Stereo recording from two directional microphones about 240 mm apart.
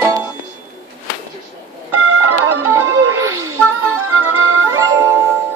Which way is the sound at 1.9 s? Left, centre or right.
Right.